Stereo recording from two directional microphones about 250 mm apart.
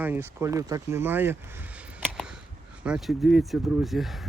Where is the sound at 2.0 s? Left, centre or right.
Centre.